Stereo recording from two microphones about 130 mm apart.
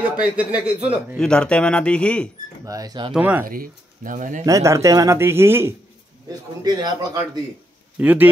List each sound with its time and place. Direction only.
0.0 s speech: 10° right (ahead or behind)
1.1 s speech: 5° left (ahead or behind)
2.6 s speech: 30° right (ahead or behind)
3.1 s speech: 10° right (ahead or behind)
3.4 s speech: 90° right
4.5 s speech: 25° right (ahead or behind)
6.6 s speech: 30° right (ahead or behind)
8.0 s speech: 15° right (ahead or behind)